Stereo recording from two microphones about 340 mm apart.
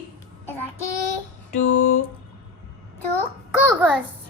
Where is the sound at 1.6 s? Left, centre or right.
Left.